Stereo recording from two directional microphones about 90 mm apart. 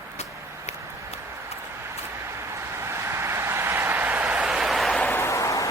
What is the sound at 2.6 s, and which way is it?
Vehicle, 30° right (ahead or behind).